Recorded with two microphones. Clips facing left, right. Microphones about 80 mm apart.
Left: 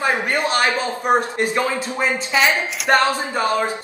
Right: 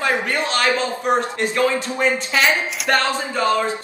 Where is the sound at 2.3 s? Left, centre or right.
Centre.